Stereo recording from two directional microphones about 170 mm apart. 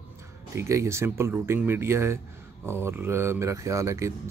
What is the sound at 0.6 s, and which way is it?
Speech, 15° right (ahead or behind).